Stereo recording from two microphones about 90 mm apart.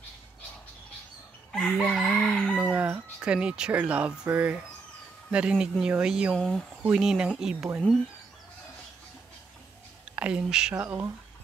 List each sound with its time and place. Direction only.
1.5 s chicken: 5° left (ahead or behind)
2.0 s crowing: 5° left (ahead or behind)
2.5 s speech: 15° right (ahead or behind)
6.3 s chicken: 5° left (ahead or behind)
6.8 s speech: 10° right (ahead or behind)
10.0 s speech: 10° right (ahead or behind)
10.7 s speech: 20° right (ahead or behind)